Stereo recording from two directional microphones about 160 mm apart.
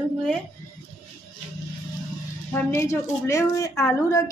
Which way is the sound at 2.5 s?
15° left (ahead or behind).